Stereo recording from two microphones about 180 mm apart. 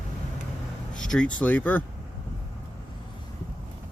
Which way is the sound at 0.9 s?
5° left (ahead or behind).